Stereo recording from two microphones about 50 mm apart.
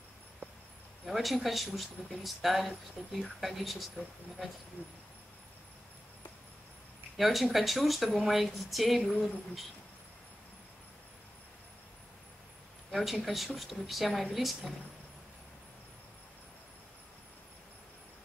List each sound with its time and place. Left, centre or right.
1.0 s speech: centre
4.8 s speech: left
7.2 s speech: centre
12.9 s speech: centre